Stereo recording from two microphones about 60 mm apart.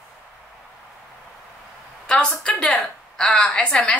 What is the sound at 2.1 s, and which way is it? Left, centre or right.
A woman's voice, centre.